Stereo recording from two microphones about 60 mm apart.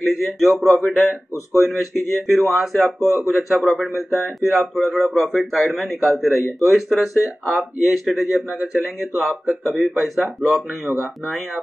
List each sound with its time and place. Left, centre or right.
0.1 s speech: centre
9.2 s speech: centre